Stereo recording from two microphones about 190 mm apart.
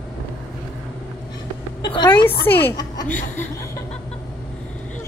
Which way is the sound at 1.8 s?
20° left (ahead or behind).